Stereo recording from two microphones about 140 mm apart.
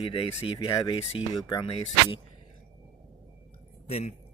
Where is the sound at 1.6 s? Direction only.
45° left (ahead or behind).